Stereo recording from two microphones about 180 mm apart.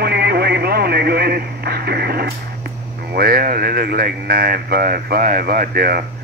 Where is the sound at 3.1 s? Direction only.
55° right (ahead or behind).